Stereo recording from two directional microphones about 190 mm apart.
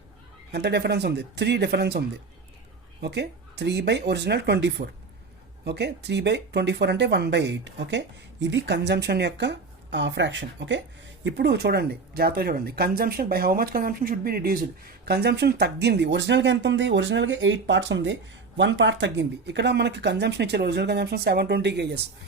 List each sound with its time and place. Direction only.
0.5 s speech: 60° right (ahead or behind)